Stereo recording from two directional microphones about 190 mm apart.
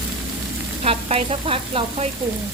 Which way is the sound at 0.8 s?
30° right (ahead or behind).